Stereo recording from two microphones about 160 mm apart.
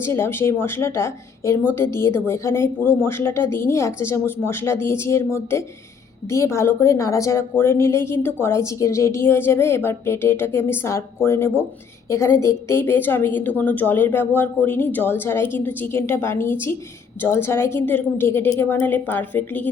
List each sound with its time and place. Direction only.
0.0 s a woman's voice: 15° left (ahead or behind)